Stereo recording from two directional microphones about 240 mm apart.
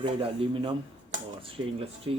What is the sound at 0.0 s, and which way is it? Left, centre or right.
Mechanisms, right.